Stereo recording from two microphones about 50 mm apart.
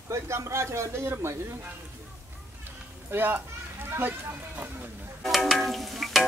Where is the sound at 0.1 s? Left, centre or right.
Right.